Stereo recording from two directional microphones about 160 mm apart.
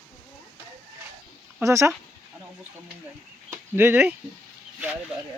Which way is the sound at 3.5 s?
15° right (ahead or behind).